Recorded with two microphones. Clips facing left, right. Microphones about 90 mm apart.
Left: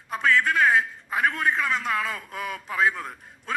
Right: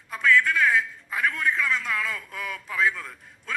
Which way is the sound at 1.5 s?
20° left (ahead or behind).